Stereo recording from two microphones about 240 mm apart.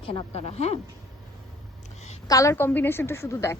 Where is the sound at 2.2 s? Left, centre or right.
Centre.